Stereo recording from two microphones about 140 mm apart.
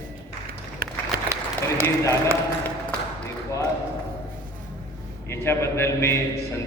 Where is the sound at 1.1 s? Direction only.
90° right.